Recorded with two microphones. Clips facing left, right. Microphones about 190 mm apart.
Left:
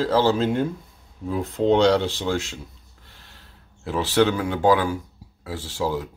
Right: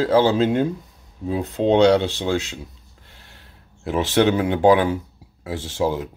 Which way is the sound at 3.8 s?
20° right (ahead or behind).